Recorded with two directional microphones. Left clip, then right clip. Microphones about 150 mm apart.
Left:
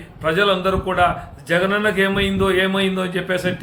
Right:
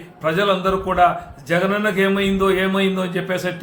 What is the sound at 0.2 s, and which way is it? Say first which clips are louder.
A man's voice: left 1 dB; 5° left (ahead or behind).